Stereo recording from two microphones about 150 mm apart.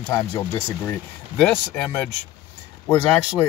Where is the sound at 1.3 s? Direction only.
5° left (ahead or behind).